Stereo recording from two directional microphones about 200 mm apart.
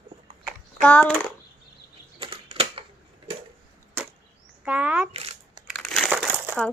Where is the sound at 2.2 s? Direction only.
30° right (ahead or behind).